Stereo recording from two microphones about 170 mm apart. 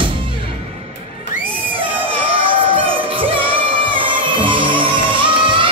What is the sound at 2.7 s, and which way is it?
Music, 30° right (ahead or behind).